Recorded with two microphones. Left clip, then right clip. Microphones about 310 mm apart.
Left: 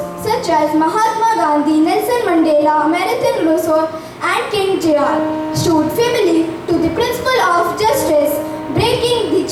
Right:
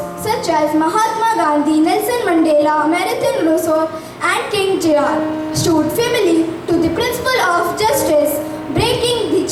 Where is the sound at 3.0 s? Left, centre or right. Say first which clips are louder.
Left 1 dB; centre.